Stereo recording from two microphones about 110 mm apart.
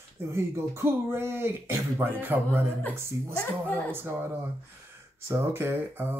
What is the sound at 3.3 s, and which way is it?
Speech, 15° left (ahead or behind).